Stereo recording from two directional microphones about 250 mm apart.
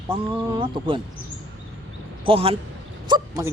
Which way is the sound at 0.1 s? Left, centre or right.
Centre.